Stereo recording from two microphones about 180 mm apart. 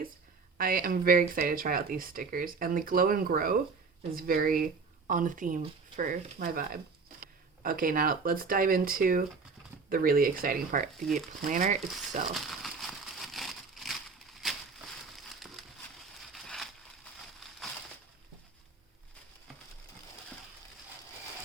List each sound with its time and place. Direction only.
0.6 s speech: 55° right (ahead or behind)
12.3 s crumpling: centre (ahead or behind)
14.4 s a sound: centre (ahead or behind)
16.3 s crushing: centre (ahead or behind)